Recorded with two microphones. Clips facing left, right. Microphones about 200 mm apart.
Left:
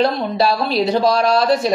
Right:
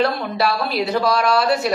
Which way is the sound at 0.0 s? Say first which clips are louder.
Left 3 dB; 25° left (ahead or behind).